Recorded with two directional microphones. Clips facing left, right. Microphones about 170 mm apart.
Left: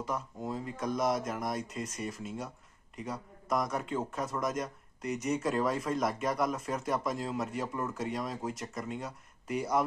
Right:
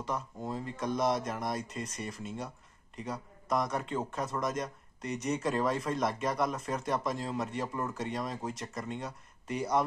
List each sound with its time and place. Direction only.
0.0 s a man's voice: centre (ahead or behind)